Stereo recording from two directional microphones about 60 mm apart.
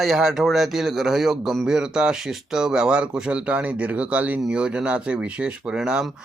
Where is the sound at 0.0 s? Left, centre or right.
Centre.